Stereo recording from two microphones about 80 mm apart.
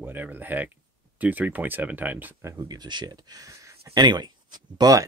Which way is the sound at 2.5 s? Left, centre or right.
Right.